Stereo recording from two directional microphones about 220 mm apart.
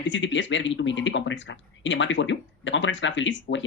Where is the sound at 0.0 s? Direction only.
55° left (ahead or behind).